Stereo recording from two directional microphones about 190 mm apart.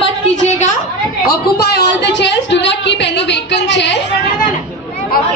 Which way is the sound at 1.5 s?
60° left (ahead or behind).